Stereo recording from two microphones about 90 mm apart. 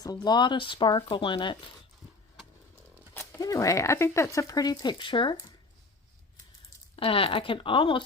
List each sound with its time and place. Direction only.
0.0 s speech: 45° left (ahead or behind); by 1.7 s 65° left (ahead or behind)
3.2 s speech: 35° left (ahead or behind); by 5.4 s 65° left (ahead or behind)
6.9 s speech: 90° left; by 8.0 s 70° left (ahead or behind)